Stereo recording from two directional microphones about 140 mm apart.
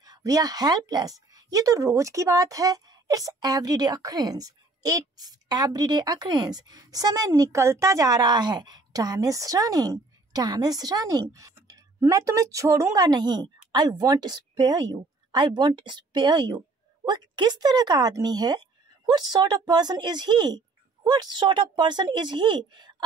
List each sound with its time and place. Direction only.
0.0 s speech: 25° right (ahead or behind)